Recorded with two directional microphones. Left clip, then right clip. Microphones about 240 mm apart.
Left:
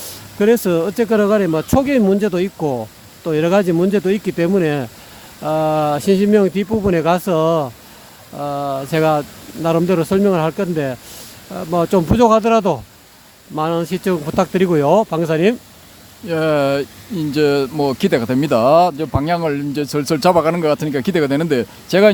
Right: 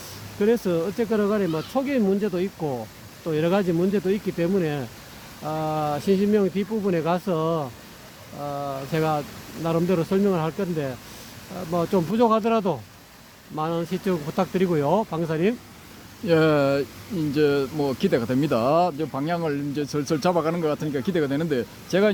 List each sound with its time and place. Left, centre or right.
0.0 s speech: left
16.2 s speech: centre